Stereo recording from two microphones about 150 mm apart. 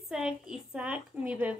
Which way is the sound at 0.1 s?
5° right (ahead or behind).